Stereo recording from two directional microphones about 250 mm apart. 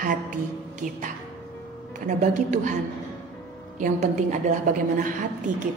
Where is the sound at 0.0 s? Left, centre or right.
Right.